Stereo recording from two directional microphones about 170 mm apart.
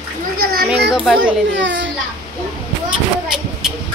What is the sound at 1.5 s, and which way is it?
Speech, 90° right.